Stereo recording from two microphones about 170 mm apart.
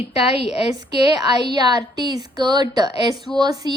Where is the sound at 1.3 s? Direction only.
25° right (ahead or behind).